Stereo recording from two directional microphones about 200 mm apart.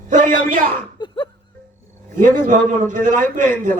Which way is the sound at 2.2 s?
40° right (ahead or behind).